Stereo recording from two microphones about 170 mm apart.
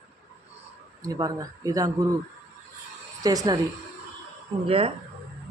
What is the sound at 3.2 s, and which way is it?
Speech, 20° right (ahead or behind).